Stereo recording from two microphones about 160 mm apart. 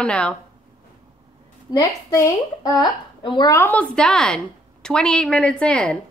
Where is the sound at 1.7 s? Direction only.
20° left (ahead or behind).